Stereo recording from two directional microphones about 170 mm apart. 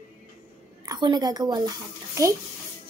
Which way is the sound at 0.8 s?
25° right (ahead or behind).